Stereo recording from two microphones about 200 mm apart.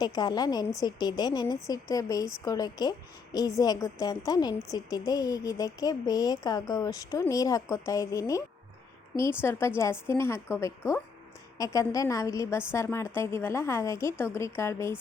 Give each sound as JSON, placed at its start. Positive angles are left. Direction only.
{"t": 0.0, "sound": "a woman's voice", "side_deg": 20}